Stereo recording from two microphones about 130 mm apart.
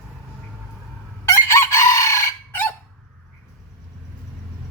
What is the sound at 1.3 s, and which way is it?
Chicken, 20° left (ahead or behind).